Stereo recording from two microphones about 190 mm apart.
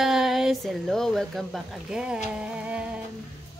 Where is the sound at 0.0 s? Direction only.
Centre (ahead or behind).